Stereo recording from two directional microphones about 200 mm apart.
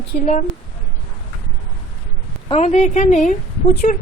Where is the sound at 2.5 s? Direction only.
30° left (ahead or behind).